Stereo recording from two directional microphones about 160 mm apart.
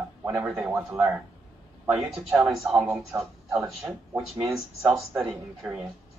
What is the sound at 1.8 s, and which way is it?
A man's voice, 5° right (ahead or behind).